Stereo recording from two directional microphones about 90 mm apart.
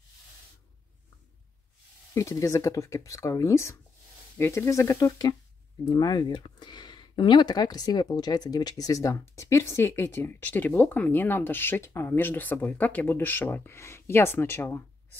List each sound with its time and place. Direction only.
2.1 s speech: 35° left (ahead or behind)
5.9 s speech: 50° left (ahead or behind); by 14.8 s 25° left (ahead or behind)